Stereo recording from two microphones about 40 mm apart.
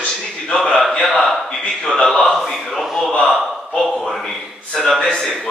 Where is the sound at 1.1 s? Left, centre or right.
Centre.